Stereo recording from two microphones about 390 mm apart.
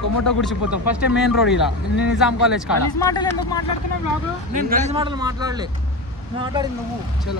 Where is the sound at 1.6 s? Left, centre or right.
Centre.